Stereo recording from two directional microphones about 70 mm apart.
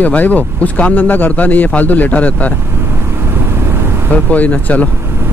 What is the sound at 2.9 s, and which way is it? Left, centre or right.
Vehicle, right.